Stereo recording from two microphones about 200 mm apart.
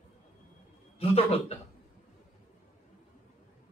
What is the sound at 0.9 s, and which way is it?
Speech, 30° left (ahead or behind).